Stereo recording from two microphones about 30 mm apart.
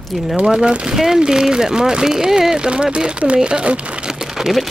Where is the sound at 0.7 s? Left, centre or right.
Right.